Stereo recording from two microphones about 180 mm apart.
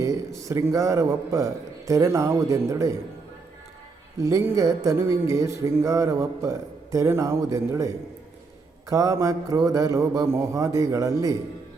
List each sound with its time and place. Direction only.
0.0 s speech: 15° right (ahead or behind)
4.2 s speech: 15° right (ahead or behind)